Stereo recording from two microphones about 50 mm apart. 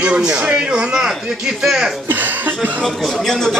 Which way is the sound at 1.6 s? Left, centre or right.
Centre.